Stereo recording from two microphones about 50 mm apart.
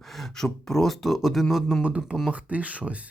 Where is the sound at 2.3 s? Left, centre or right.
Right.